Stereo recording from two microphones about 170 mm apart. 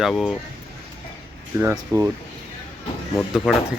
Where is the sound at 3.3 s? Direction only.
5° right (ahead or behind).